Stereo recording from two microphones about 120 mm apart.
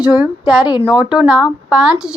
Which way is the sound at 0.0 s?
10° right (ahead or behind).